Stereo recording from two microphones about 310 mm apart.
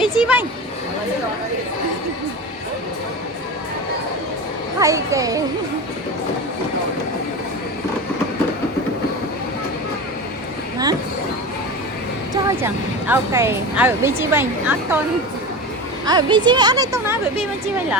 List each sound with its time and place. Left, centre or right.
0.0 s a sound: centre
4.8 s speech: centre
12.3 s speech: centre
16.0 s speech: centre